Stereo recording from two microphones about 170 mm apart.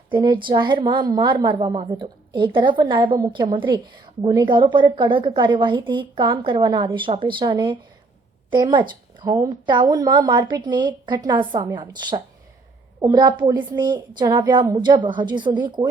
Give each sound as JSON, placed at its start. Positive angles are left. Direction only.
{"t": 0.1, "sound": "a woman's voice", "side_deg": -30}